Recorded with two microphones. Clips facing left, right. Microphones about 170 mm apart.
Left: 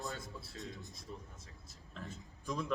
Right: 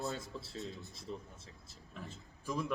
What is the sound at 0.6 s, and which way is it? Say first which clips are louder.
Speech: right 1 dB; 15° left (ahead or behind).